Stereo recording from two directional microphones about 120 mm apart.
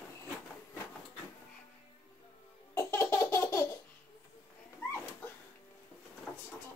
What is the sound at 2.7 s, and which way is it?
Laughter, 25° left (ahead or behind).